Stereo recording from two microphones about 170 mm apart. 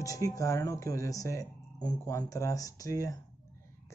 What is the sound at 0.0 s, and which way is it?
A man's voice, 20° left (ahead or behind).